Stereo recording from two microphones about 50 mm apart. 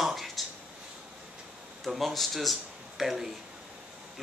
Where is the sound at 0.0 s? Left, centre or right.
Centre.